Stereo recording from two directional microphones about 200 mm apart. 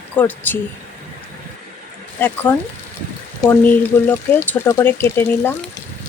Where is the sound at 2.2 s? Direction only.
10° left (ahead or behind).